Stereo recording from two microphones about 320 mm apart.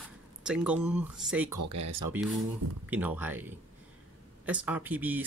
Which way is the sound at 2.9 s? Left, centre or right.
Centre.